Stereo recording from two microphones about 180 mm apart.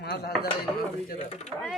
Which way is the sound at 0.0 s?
65° left (ahead or behind).